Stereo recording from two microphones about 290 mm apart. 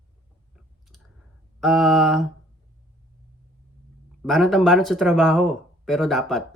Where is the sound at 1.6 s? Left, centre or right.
Centre.